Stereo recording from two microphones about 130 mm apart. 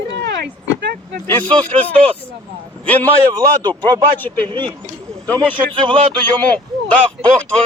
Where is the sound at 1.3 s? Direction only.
15° left (ahead or behind).